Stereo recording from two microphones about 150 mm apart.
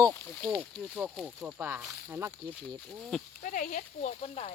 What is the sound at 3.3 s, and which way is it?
Speech, 65° left (ahead or behind).